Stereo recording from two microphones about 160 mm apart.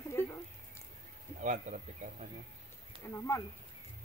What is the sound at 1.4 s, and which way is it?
Speech, 50° right (ahead or behind).